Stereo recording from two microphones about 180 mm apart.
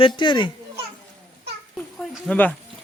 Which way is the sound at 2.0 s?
10° left (ahead or behind).